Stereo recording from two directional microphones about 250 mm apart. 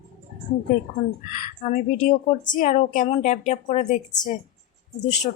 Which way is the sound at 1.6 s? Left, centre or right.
Left.